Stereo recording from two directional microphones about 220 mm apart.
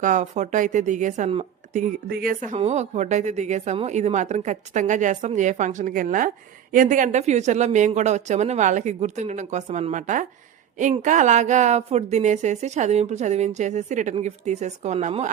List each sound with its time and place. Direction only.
0.0 s speech: 35° right (ahead or behind)